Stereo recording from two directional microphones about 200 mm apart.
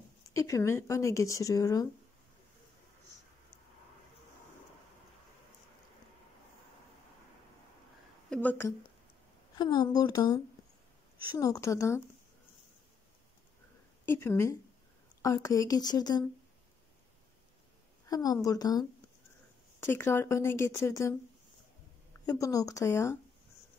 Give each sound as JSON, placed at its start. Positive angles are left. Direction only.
{"t": 0.3, "sound": "speech", "side_deg": 15}
{"t": 8.3, "sound": "speech", "side_deg": 5}
{"t": 9.6, "sound": "speech", "side_deg": 20}
{"t": 14.0, "sound": "speech", "side_deg": 10}
{"t": 18.0, "sound": "a woman's voice", "side_deg": 20}
{"t": 22.2, "sound": "speech", "side_deg": 15}